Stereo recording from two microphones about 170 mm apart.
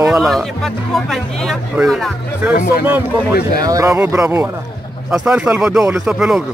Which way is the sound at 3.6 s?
20° right (ahead or behind).